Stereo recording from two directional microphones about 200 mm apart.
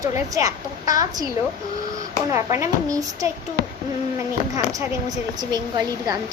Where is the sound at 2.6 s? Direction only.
15° right (ahead or behind).